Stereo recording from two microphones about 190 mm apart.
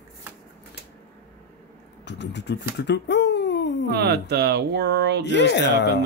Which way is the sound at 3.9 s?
60° right (ahead or behind).